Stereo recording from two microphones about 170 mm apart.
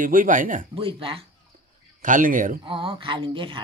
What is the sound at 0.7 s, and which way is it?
Speech, 30° right (ahead or behind).